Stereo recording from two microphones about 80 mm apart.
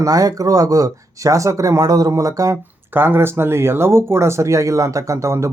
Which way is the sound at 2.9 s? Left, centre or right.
Right.